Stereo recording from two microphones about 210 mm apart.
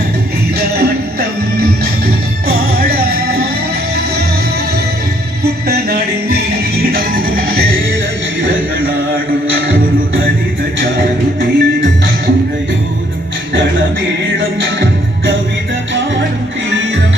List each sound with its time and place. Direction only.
0.8 s music: 50° right (ahead or behind)
5.4 s music: 50° right (ahead or behind)
10.8 s music: 55° right (ahead or behind)
14.3 s music: 65° right (ahead or behind)